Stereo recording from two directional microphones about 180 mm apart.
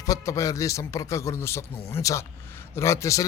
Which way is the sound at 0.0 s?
20° left (ahead or behind).